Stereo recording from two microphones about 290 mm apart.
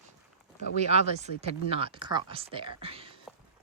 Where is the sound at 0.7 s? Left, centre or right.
Right.